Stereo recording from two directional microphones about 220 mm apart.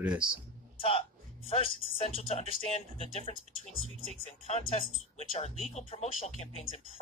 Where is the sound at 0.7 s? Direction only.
25° left (ahead or behind).